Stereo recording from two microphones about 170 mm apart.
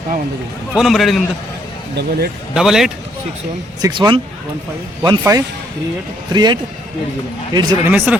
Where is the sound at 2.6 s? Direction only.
Centre (ahead or behind).